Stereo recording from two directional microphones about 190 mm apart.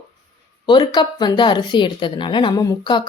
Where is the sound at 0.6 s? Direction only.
25° left (ahead or behind).